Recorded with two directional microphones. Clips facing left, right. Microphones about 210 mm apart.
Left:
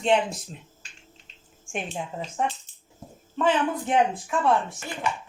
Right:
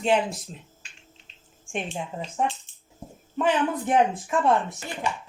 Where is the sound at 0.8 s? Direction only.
40° left (ahead or behind).